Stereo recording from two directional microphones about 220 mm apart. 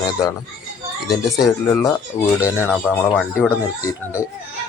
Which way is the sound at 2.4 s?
10° left (ahead or behind).